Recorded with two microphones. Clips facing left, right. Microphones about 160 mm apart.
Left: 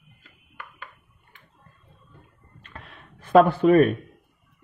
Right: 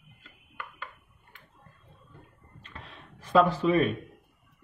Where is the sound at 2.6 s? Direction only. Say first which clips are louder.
Left 2 dB; 55° left (ahead or behind).